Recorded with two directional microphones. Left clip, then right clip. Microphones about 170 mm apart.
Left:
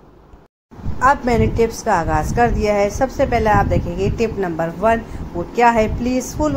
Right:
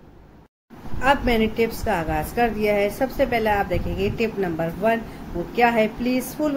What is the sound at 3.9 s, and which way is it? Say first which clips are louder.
Speech: left 4 dB; 50° left (ahead or behind).